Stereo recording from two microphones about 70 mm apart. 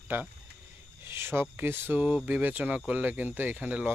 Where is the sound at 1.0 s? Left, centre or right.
Right.